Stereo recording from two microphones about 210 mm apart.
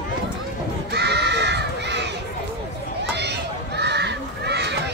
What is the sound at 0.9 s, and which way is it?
Crow, 55° right (ahead or behind).